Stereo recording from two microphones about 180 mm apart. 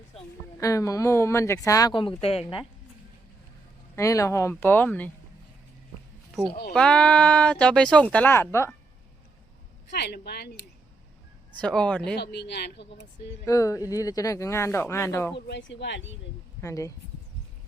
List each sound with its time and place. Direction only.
0.6 s speech: 20° left (ahead or behind)
3.9 s speech: 15° left (ahead or behind)
6.7 s speech: 5° left (ahead or behind)
9.9 s a woman's voice: 65° left (ahead or behind)
11.6 s speech: 5° left (ahead or behind)
12.1 s speech: 65° left (ahead or behind)
13.4 s speech: 20° left (ahead or behind)
15.4 s speech: 80° left
16.6 s speech: 15° left (ahead or behind)